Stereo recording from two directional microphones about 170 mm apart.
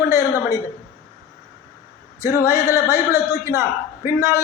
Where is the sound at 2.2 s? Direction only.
15° right (ahead or behind).